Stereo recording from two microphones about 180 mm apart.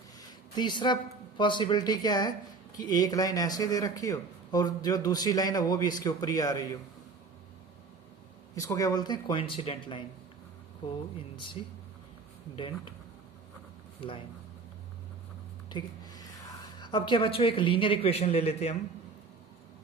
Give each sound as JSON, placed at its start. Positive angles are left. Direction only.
{"t": 0.2, "sound": "a sound", "side_deg": 25}
{"t": 1.4, "sound": "speech", "side_deg": 25}
{"t": 8.5, "sound": "speech", "side_deg": 20}
{"t": 11.6, "sound": "speech", "side_deg": 30}
{"t": 15.7, "sound": "speech", "side_deg": 25}